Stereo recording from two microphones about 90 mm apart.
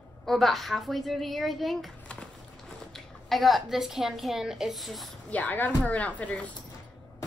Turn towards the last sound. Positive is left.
turn(degrees=15)  # may be behind; listen again after turning